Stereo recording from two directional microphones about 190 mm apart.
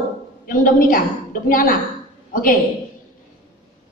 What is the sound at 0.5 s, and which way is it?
A woman's voice, 45° left (ahead or behind).